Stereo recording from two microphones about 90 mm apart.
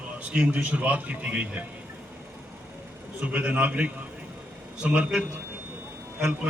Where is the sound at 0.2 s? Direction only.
10° right (ahead or behind).